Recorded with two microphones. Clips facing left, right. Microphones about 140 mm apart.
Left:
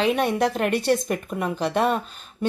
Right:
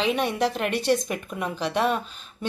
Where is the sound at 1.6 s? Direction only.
50° left (ahead or behind).